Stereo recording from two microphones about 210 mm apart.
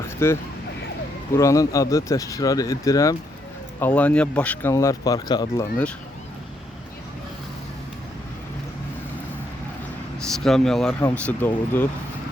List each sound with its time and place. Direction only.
0.2 s speech: 10° left (ahead or behind)
1.4 s speech: 15° left (ahead or behind)
10.2 s speech: centre (ahead or behind)